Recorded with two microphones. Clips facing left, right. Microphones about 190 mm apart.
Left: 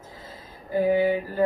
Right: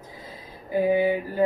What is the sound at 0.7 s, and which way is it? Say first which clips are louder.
Speech: even; 15° right (ahead or behind).